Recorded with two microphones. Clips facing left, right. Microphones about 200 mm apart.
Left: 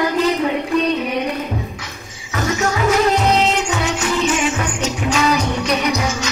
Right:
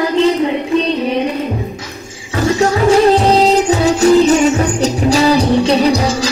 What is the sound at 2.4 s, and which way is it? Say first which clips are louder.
Music: right 6 dB; 30° right (ahead or behind).